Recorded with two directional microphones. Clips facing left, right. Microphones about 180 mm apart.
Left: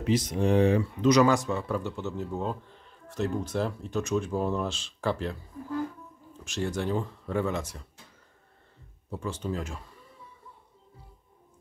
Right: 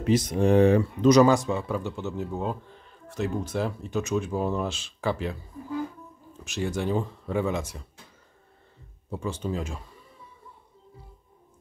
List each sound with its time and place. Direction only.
0.0 s speech: 50° right (ahead or behind)
1.2 s a man's voice: 35° right (ahead or behind)
1.5 s speech: 15° right (ahead or behind)
9.1 s speech: 15° right (ahead or behind)